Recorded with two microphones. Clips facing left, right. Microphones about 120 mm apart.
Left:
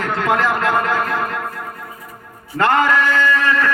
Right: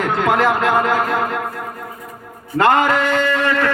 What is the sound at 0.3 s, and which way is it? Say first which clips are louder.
Speech: right 1 dB; 25° right (ahead or behind).